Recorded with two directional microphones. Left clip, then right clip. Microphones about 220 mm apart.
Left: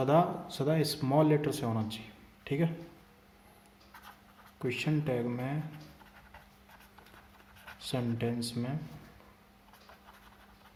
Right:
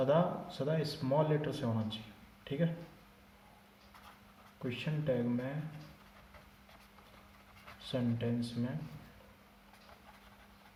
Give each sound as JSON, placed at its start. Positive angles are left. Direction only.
{"t": 0.0, "sound": "speech", "side_deg": 50}
{"t": 2.4, "sound": "a sound", "side_deg": 50}
{"t": 4.7, "sound": "speech", "side_deg": 50}
{"t": 7.9, "sound": "speech", "side_deg": 50}